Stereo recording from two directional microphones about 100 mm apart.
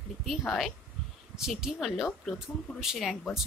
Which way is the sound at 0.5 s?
Centre (ahead or behind).